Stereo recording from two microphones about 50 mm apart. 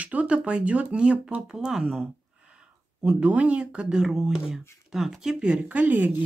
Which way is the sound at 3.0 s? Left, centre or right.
Right.